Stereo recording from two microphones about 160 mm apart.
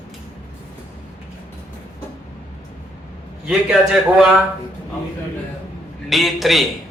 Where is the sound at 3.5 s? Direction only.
5° right (ahead or behind).